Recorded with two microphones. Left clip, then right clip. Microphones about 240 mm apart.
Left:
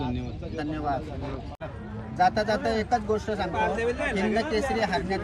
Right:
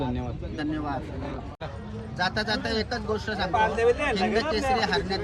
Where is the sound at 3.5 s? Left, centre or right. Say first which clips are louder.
Right 6 dB; right.